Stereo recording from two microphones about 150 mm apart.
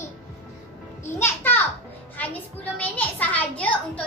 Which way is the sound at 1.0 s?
15° left (ahead or behind).